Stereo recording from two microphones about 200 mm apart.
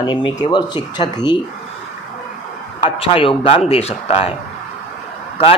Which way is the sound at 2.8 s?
25° left (ahead or behind).